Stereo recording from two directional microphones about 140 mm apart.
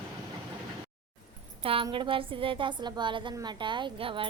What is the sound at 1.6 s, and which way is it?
A woman's voice, 40° right (ahead or behind).